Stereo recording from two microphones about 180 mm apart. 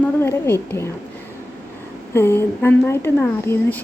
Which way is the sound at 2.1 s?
15° left (ahead or behind).